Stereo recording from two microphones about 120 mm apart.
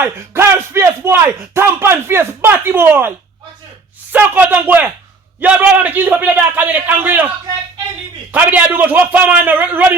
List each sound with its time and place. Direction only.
0.0 s speech: 20° right (ahead or behind)
4.1 s a man's voice: 15° right (ahead or behind)
8.3 s a man's voice: 15° right (ahead or behind)